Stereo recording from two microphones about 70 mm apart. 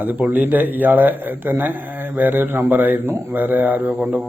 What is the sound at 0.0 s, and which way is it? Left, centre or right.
A man's voice, right.